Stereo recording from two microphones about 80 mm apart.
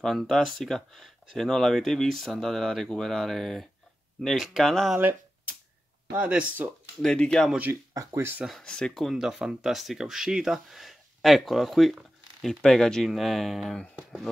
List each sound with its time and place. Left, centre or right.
0.0 s speech: centre
6.1 s speech: centre
7.0 s speech: centre
7.9 s speech: right
8.2 s speech: right
8.5 s speech: centre
9.1 s speech: centre